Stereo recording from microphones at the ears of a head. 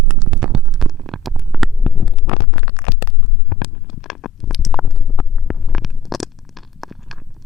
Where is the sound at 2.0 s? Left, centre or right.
Left.